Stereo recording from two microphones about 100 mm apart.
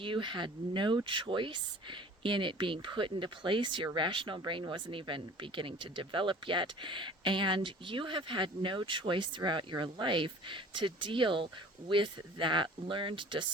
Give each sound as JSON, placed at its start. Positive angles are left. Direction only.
{"t": 0.0, "sound": "speech", "side_deg": -55}